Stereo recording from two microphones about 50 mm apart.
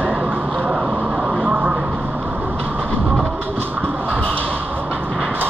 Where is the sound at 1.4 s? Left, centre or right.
Right.